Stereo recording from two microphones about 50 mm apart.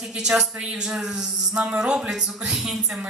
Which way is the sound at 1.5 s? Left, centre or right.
Right.